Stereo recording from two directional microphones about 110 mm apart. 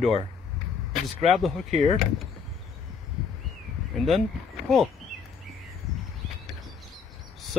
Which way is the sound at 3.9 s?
Centre (ahead or behind).